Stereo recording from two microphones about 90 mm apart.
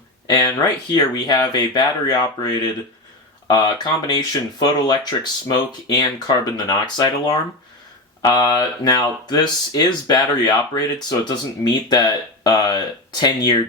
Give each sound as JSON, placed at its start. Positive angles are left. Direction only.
{"t": 0.3, "sound": "speech", "side_deg": 45}